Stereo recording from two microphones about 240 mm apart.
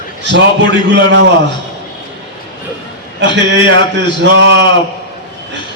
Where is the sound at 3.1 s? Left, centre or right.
Right.